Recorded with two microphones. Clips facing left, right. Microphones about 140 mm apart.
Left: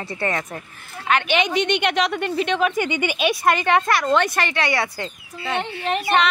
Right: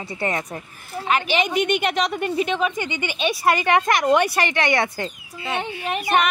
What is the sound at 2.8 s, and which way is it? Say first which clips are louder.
Speech: left 5 dB; 15° left (ahead or behind).